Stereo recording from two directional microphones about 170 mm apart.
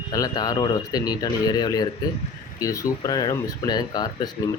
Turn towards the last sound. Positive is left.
turn(degrees=25)  # may be behind; listen again after turning